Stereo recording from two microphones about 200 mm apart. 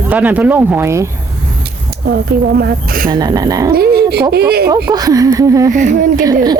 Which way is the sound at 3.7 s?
50° right (ahead or behind).